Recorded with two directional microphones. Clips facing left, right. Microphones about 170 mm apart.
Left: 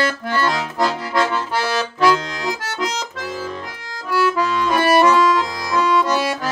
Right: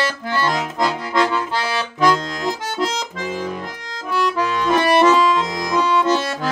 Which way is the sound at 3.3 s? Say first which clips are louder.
Right 4 dB; 10° right (ahead or behind).